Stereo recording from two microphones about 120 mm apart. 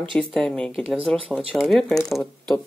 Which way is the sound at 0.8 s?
5° right (ahead or behind).